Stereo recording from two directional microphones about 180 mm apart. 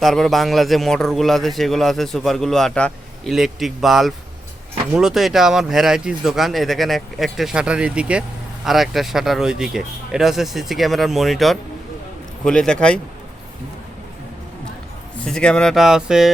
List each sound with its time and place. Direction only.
0.0 s a man's voice: centre (ahead or behind)
15.2 s a man's voice: 5° left (ahead or behind)